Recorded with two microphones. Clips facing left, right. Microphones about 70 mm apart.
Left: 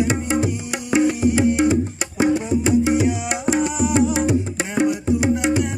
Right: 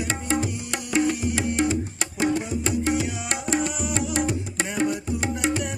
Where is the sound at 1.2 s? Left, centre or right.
Left.